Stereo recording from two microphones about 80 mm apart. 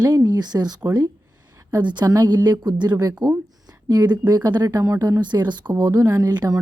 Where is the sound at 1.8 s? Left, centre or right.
Right.